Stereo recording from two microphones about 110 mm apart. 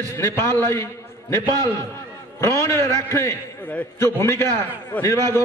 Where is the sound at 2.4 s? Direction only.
25° left (ahead or behind).